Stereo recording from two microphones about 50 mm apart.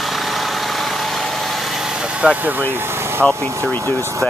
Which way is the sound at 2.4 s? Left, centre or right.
Right.